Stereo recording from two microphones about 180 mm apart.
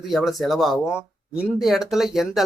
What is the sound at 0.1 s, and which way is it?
Speech, centre (ahead or behind).